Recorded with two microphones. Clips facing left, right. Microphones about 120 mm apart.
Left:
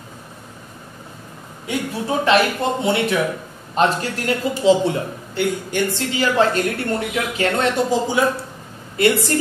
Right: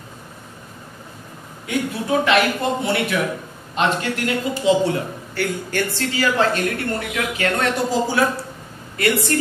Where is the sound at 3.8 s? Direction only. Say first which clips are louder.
Left 2 dB; 35° left (ahead or behind).